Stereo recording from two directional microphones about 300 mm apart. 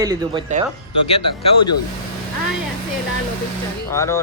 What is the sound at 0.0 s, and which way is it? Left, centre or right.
Male singing, centre.